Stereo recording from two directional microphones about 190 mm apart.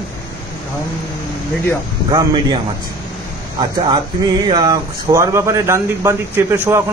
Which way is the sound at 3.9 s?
20° right (ahead or behind).